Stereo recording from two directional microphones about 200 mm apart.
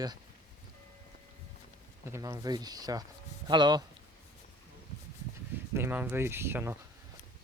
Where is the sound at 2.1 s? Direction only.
15° right (ahead or behind).